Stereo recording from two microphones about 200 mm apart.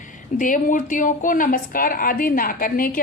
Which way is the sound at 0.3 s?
40° left (ahead or behind).